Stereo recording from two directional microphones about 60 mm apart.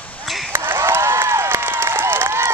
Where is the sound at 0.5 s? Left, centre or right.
Right.